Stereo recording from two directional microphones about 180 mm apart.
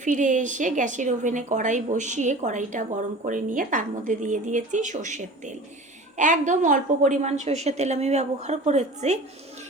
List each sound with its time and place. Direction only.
0.0 s a woman's voice: 45° right (ahead or behind)